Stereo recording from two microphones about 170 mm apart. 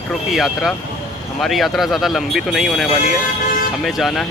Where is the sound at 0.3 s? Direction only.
Centre (ahead or behind).